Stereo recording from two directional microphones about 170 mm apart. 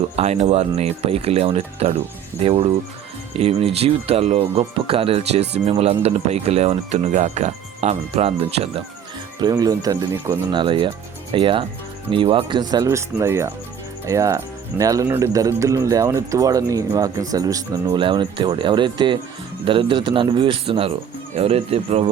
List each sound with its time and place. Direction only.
0.2 s speech: 40° right (ahead or behind)
9.4 s speech: 25° right (ahead or behind)